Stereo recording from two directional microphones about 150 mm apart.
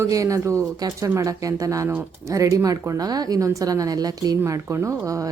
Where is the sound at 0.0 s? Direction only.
20° right (ahead or behind).